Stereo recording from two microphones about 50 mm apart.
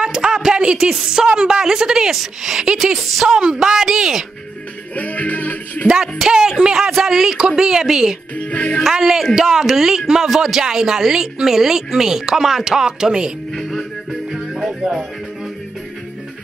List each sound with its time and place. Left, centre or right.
0.0 s a sound: centre
0.9 s speech: centre
4.9 s music: left
6.1 s speech: centre
8.4 s speech: left
8.9 s speech: centre
13.6 s music: centre
14.7 s music: centre